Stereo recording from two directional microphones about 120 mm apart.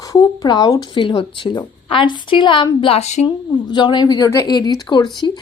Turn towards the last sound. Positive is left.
turn(degrees=35)  # may be behind; listen again after turning